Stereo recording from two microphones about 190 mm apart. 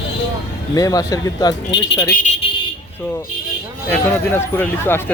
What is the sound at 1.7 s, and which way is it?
Speech, 70° left (ahead or behind).